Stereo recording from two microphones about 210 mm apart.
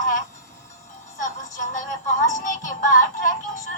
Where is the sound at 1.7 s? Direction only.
35° left (ahead or behind).